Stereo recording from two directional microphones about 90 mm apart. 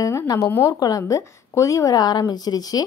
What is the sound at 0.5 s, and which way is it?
Speech, 30° left (ahead or behind).